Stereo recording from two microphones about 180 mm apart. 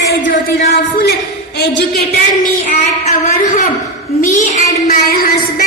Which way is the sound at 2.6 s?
45° left (ahead or behind).